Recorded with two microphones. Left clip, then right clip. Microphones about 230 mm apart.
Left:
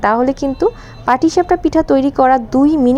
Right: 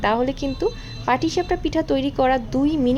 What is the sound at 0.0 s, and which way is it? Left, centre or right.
A woman's voice, left.